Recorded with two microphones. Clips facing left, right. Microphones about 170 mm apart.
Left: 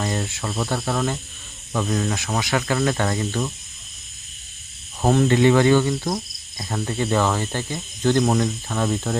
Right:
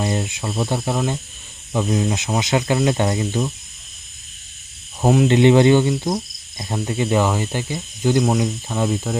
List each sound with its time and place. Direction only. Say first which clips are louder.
0.0 s cricket: right 3 dB; 15° right (ahead or behind)
5.0 s cricket: right 2 dB; 10° right (ahead or behind)
5.4 s cricket: right 4 dB; 20° right (ahead or behind)